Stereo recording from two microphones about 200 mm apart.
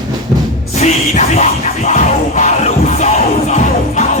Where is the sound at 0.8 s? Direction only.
35° left (ahead or behind).